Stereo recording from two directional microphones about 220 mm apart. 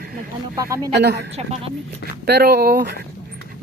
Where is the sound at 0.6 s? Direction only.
15° right (ahead or behind).